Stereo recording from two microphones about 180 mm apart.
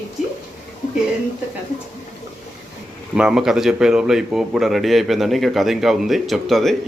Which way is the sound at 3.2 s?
5° right (ahead or behind).